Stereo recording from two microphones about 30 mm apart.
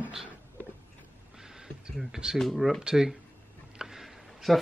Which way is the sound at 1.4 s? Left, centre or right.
Centre.